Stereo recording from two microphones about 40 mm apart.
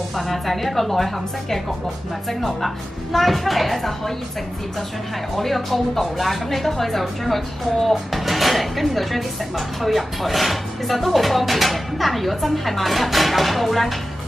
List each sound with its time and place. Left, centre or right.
0.1 s speech: centre
5.3 s speech: centre